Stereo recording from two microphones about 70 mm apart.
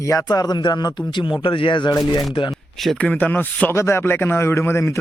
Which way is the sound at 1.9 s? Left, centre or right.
Left.